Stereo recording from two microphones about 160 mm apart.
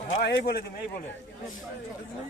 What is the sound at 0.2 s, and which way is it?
Speech, 90° left.